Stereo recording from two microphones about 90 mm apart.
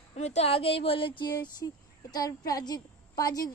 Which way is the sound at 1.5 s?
45° left (ahead or behind).